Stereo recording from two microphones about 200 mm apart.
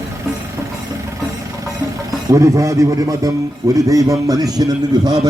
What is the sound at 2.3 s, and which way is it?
A man's voice, 15° right (ahead or behind).